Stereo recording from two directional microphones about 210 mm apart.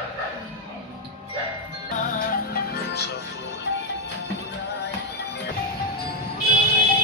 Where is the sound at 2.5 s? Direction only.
50° left (ahead or behind).